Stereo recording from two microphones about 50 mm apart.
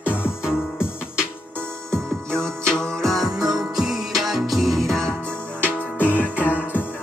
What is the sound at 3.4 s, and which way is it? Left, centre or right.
Music, centre.